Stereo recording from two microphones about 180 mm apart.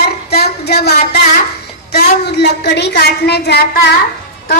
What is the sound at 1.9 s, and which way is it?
A woman's voice, 70° left (ahead or behind).